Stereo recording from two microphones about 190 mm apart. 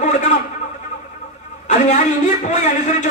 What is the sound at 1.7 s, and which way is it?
A man's voice, 40° left (ahead or behind).